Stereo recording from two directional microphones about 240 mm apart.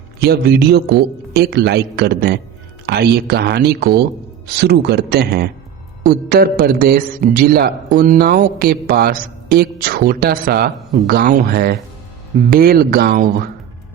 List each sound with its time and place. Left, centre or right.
0.2 s a man's voice: right